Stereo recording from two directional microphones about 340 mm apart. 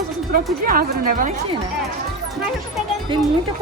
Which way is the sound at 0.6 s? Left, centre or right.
Right.